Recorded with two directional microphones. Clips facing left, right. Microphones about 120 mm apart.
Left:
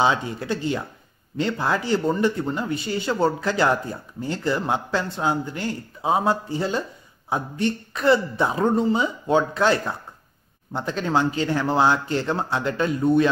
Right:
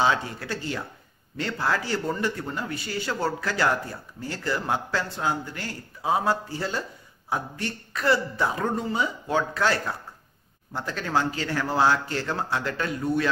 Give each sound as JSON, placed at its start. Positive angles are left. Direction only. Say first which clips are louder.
{"t": 0.0, "sound": "speech", "louder": "left 3 dB", "side_deg": 20}